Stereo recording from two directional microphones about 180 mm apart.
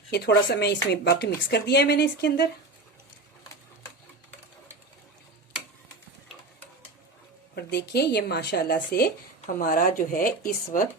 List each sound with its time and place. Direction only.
0.1 s speech: 65° left (ahead or behind)
7.5 s speech: 65° left (ahead or behind)